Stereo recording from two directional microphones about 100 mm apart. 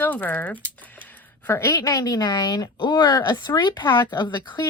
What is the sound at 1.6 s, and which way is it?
A woman's voice, 35° left (ahead or behind).